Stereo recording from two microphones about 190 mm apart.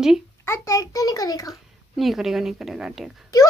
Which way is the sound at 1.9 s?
Centre (ahead or behind).